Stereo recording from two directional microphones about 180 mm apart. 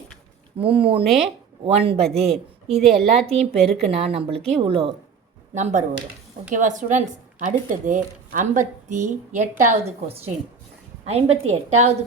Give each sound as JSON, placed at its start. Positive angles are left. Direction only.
{"t": 0.6, "sound": "a woman's voice", "side_deg": -30}
{"t": 2.0, "sound": "a woman's voice", "side_deg": 0}
{"t": 3.9, "sound": "a woman's voice", "side_deg": -35}
{"t": 5.5, "sound": "a woman's voice", "side_deg": -40}